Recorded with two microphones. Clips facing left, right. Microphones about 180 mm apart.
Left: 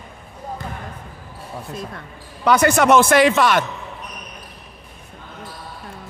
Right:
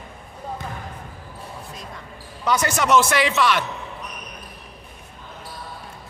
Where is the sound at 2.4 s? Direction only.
60° left (ahead or behind).